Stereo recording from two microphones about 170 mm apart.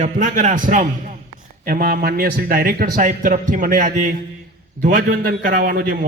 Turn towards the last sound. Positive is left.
turn(degrees=-60)  # may be behind; listen again after turning